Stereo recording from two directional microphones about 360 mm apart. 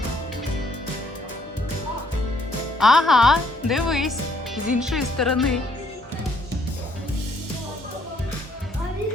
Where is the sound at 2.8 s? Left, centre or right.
Centre.